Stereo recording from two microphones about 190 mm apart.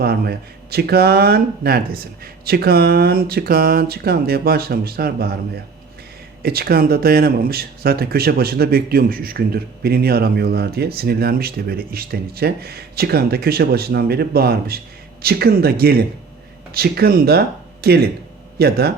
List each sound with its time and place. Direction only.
0.0 s speech: 55° right (ahead or behind)
6.4 s speech: 55° right (ahead or behind)